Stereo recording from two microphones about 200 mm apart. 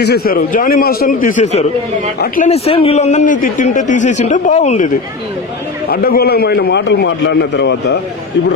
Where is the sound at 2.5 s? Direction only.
30° left (ahead or behind).